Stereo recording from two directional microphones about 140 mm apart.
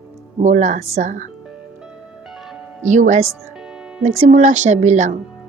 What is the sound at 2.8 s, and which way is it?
A woman's voice, 60° right (ahead or behind).